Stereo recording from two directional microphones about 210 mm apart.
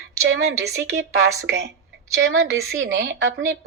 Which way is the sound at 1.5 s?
50° right (ahead or behind).